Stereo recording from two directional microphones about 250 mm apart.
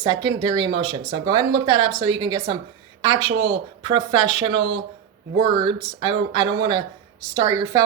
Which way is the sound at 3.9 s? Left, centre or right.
Centre.